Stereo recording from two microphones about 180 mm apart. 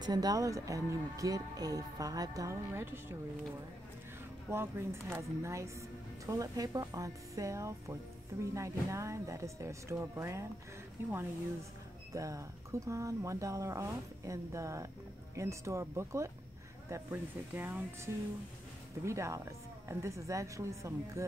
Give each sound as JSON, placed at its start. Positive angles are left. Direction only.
{"t": 0.0, "sound": "speech", "side_deg": -20}
{"t": 4.5, "sound": "speech", "side_deg": -15}
{"t": 12.1, "sound": "speech", "side_deg": -20}